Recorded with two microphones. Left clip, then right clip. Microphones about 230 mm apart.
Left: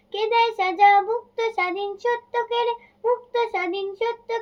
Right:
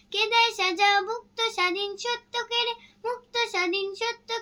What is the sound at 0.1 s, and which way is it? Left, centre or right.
Child singing, right.